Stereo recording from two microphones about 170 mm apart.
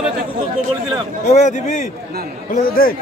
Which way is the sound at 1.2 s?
45° left (ahead or behind).